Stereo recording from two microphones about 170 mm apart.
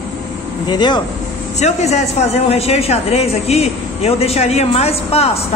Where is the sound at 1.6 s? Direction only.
45° left (ahead or behind).